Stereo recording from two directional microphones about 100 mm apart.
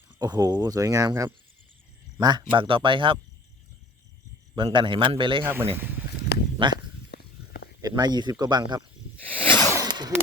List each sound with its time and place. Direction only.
0.2 s speech: 40° right (ahead or behind)
2.1 s speech: 50° right (ahead or behind)
4.5 s speech: 55° right (ahead or behind)
5.4 s speech: 25° right (ahead or behind)
6.6 s speech: 55° right (ahead or behind)
7.8 s speech: 40° right (ahead or behind)
9.3 s zipper: 20° left (ahead or behind)
9.8 s a sound: 45° right (ahead or behind)